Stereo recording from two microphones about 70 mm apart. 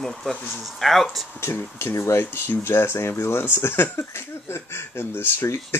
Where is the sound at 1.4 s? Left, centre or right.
Left.